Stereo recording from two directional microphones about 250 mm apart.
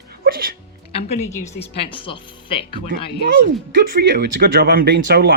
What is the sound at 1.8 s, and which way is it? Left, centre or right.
A woman's voice, left.